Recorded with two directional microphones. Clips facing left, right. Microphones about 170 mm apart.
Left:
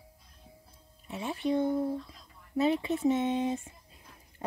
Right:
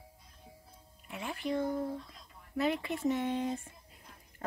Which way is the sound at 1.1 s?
20° left (ahead or behind).